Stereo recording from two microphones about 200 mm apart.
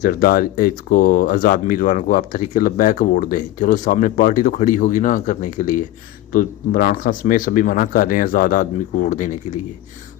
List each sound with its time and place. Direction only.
0.0 s speech: 50° left (ahead or behind)